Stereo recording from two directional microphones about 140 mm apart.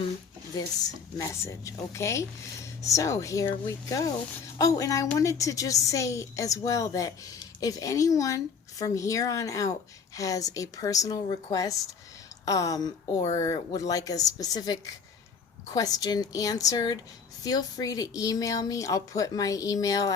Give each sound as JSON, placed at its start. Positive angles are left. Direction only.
{"t": 0.5, "sound": "speech", "side_deg": 25}